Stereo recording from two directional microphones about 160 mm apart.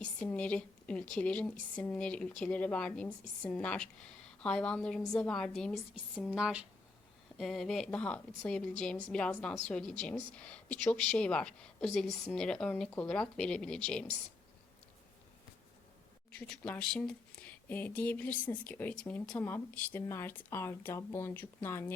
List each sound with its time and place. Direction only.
0.0 s a woman's voice: 5° left (ahead or behind)
16.5 s speech: 5° left (ahead or behind)